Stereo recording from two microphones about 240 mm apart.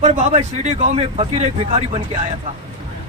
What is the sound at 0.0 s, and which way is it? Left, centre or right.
Speech, right.